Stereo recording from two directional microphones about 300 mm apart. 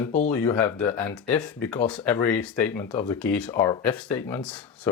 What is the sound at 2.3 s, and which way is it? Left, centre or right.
Speech, left.